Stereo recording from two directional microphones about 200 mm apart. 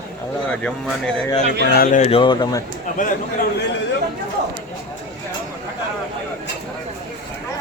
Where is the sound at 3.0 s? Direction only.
40° left (ahead or behind).